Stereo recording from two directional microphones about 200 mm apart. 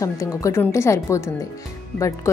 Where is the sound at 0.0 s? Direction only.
15° left (ahead or behind).